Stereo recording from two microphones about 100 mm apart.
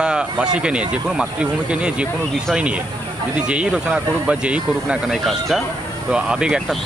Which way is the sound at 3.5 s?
10° right (ahead or behind).